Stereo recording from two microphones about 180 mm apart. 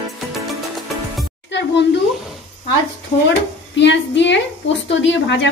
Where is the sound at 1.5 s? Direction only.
75° left (ahead or behind).